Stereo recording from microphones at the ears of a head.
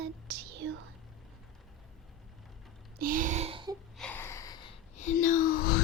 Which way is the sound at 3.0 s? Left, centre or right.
Right.